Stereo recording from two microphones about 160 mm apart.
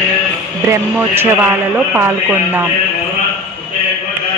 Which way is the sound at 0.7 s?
15° right (ahead or behind).